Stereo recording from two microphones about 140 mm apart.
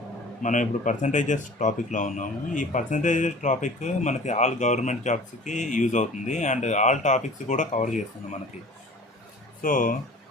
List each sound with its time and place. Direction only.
0.4 s speech: 60° left (ahead or behind)
9.6 s speech: 75° left (ahead or behind)